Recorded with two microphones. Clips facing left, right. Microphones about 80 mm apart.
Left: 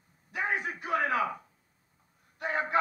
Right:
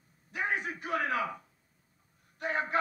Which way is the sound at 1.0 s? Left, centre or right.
Centre.